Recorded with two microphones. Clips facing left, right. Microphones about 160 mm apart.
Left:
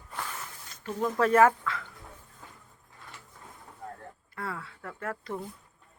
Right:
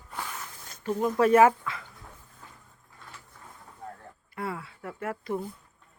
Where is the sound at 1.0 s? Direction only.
10° right (ahead or behind).